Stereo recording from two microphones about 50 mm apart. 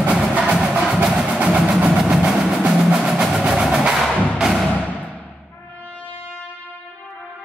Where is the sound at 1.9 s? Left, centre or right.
Centre.